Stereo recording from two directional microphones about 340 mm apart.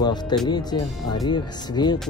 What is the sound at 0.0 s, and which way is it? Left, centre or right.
Speech, centre.